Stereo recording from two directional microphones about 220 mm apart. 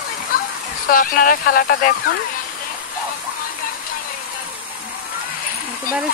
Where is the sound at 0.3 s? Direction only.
40° left (ahead or behind).